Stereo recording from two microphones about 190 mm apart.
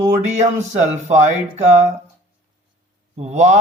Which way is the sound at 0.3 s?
35° right (ahead or behind).